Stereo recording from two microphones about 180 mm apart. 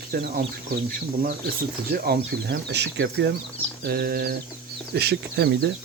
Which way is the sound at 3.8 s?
60° right (ahead or behind).